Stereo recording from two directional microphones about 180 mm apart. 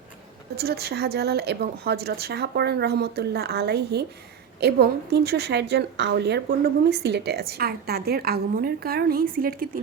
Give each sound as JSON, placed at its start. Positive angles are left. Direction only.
{"t": 0.5, "sound": "a woman's voice", "side_deg": -60}